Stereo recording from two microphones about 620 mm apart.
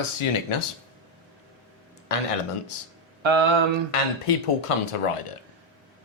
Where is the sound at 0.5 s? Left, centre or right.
Left.